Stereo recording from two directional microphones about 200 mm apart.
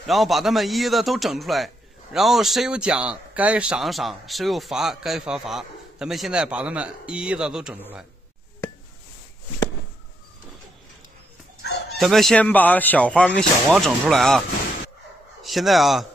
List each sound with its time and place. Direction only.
0.0 s a man's voice: centre (ahead or behind)
11.6 s bow-wow: 55° left (ahead or behind)
12.0 s a man's voice: centre (ahead or behind)
15.4 s a man's voice: centre (ahead or behind)